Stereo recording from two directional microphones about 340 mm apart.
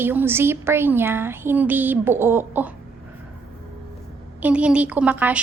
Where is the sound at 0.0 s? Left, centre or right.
Centre.